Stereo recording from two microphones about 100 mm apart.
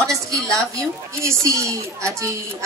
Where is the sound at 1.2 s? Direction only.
30° right (ahead or behind).